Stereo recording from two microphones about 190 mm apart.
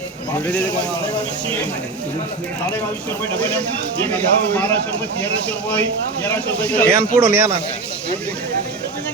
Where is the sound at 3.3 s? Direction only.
5° left (ahead or behind).